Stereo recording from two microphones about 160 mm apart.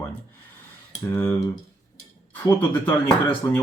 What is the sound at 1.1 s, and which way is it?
Speech, 15° left (ahead or behind).